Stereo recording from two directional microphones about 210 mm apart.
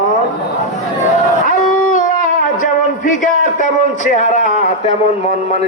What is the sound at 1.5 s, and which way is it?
Howl, 40° left (ahead or behind).